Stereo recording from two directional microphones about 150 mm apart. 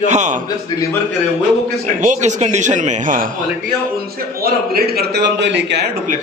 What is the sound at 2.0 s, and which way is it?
Speech, 55° right (ahead or behind).